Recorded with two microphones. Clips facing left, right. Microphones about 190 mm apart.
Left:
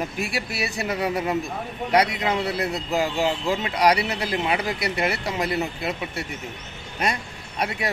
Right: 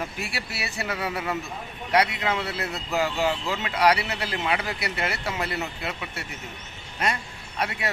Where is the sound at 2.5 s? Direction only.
15° left (ahead or behind).